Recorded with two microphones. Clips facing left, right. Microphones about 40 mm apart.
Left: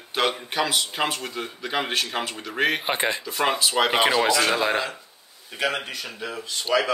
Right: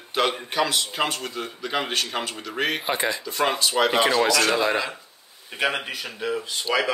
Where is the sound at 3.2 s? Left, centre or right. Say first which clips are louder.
Right 1 dB; centre; by 4.8 s left.